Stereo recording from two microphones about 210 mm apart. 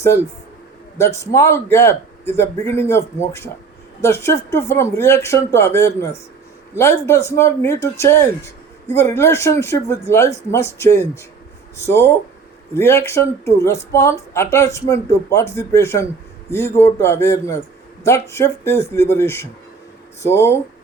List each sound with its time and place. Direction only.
0.9 s speech: 15° left (ahead or behind)